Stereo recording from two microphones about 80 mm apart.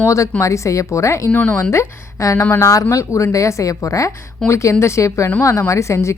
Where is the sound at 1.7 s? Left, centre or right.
Left.